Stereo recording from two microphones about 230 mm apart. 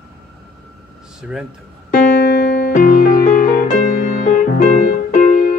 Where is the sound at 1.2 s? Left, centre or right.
Centre.